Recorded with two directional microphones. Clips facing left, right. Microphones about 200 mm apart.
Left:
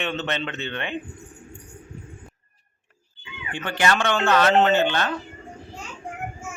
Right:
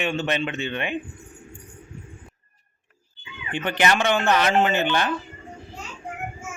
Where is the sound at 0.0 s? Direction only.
15° right (ahead or behind).